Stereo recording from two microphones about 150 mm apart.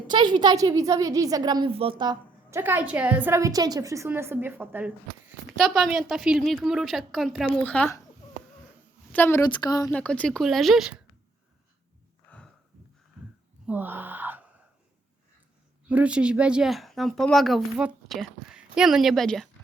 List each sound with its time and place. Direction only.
0.1 s a woman's voice: 30° right (ahead or behind)
2.5 s a woman's voice: 15° right (ahead or behind)
5.5 s a woman's voice: centre (ahead or behind)
9.1 s a woman's voice: 15° left (ahead or behind)
9.5 s speech: 25° left (ahead or behind)
9.9 s speech: 10° left (ahead or behind)
12.3 s a sound: 10° left (ahead or behind)
13.2 s a sound: 5° right (ahead or behind)
15.9 s speech: 10° right (ahead or behind)